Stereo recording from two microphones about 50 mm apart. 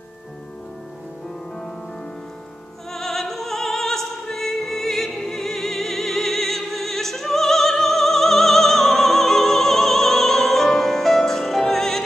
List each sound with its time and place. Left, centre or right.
2.9 s opera: centre